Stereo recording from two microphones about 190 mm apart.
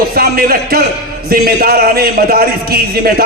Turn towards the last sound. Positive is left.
turn(degrees=-55)  # may be behind; listen again after turning